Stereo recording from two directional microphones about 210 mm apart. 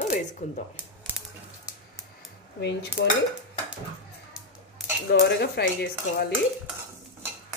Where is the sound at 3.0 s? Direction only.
55° left (ahead or behind).